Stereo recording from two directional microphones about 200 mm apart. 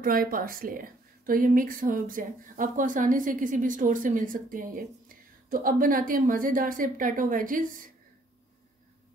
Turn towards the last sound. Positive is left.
turn(degrees=-40)  # may be behind; listen again after turning